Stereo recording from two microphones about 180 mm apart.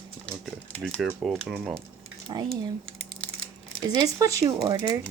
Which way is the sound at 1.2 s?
Centre (ahead or behind).